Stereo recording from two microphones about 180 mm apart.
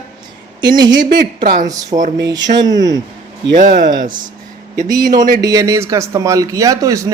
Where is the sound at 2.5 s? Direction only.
45° right (ahead or behind).